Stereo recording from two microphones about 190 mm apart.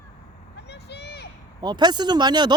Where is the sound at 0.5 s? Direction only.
60° left (ahead or behind).